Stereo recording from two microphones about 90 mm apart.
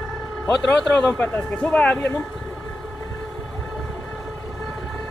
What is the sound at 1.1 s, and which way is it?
Speech, 20° left (ahead or behind).